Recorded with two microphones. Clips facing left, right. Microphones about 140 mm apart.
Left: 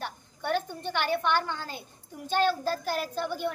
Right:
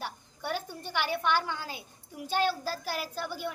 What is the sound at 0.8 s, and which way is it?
A woman's voice, 10° right (ahead or behind).